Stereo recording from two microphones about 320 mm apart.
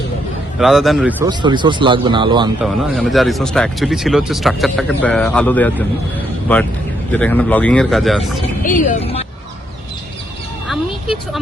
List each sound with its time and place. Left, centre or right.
0.6 s speech: centre
2.6 s speech: centre
7.1 s speech: centre
8.6 s speech: left